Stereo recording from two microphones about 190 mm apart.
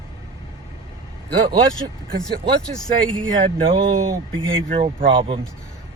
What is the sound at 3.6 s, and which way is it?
Speech, 30° right (ahead or behind).